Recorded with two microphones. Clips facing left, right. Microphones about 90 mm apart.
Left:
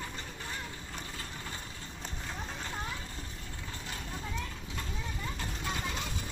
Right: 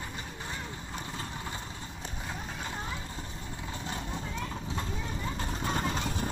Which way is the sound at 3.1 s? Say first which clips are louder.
Right 4 dB; 20° right (ahead or behind).